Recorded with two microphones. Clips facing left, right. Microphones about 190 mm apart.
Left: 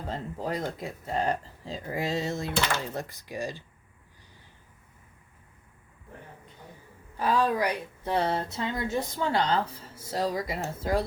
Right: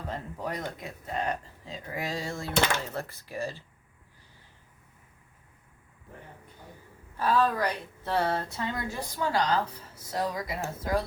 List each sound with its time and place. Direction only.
0.1 s a woman's voice: 25° left (ahead or behind)
7.2 s a woman's voice: 15° left (ahead or behind)